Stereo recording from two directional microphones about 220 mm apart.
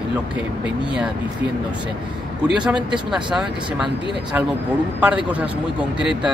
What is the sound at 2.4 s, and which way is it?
Speech, 5° right (ahead or behind).